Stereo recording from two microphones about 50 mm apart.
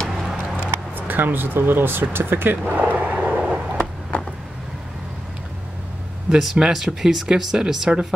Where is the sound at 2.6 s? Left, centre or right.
Right.